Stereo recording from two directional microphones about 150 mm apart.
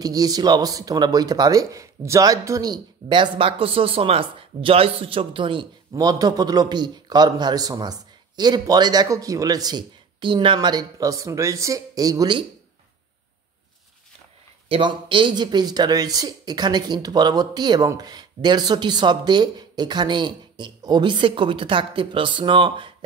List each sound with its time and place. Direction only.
0.0 s speech: 25° right (ahead or behind)
14.7 s speech: 35° right (ahead or behind)